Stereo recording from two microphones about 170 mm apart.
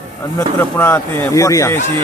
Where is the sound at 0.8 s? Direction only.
10° left (ahead or behind).